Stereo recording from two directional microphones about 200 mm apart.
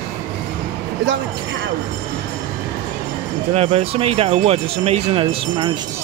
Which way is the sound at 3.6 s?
30° right (ahead or behind).